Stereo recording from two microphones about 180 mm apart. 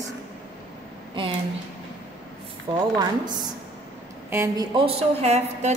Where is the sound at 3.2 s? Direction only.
25° right (ahead or behind).